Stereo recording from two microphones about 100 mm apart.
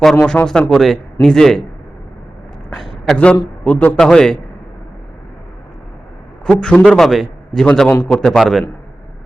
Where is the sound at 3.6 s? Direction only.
15° left (ahead or behind).